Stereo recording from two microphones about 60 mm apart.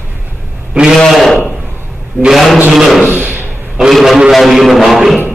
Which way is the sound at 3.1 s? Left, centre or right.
Right.